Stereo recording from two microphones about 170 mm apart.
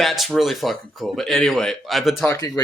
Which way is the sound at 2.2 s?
20° left (ahead or behind).